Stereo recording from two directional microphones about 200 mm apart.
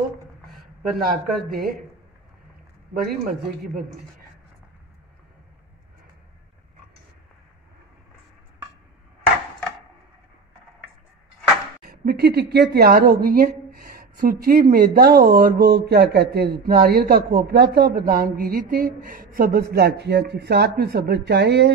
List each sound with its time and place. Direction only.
0.9 s a woman's voice: 45° right (ahead or behind)
2.9 s a woman's voice: 50° right (ahead or behind)
11.8 s a woman's voice: 50° right (ahead or behind)